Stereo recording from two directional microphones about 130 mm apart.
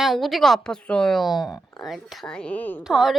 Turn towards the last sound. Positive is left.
turn(degrees=-5)  # may be behind; listen again after turning